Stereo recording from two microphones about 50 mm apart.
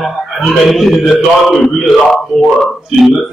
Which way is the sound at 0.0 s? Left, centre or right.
Centre.